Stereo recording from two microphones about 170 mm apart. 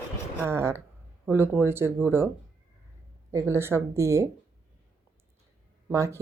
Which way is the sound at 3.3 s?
15° right (ahead or behind).